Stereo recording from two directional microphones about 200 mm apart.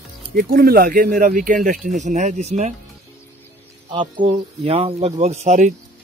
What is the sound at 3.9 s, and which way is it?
Speech, 25° right (ahead or behind).